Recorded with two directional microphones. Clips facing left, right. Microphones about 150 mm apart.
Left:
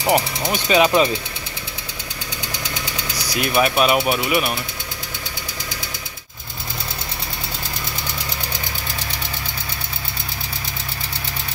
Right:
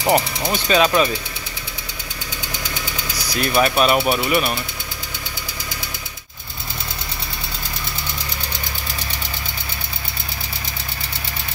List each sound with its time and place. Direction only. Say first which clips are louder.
0.0 s speech: right 1 dB; centre (ahead or behind)
0.5 s speech: left 1 dB; 15° left (ahead or behind)
3.3 s speech: right 1 dB; 10° left (ahead or behind)